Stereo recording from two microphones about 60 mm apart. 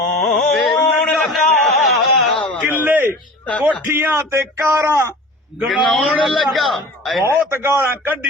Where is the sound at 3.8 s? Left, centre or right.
Right.